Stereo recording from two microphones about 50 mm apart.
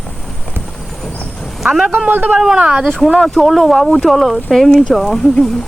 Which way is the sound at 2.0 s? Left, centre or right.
Right.